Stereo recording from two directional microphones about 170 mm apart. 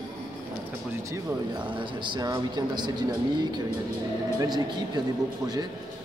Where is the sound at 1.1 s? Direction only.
30° right (ahead or behind).